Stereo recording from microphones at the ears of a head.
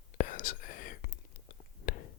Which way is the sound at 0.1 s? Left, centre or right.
Left.